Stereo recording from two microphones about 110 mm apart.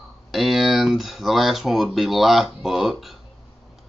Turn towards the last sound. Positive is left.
turn(degrees=0)  # may be behind; listen again after turning